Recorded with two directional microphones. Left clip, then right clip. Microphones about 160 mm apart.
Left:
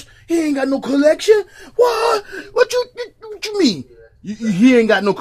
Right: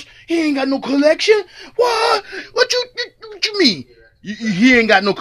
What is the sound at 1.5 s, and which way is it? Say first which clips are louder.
Speech: right 2 dB; 25° right (ahead or behind).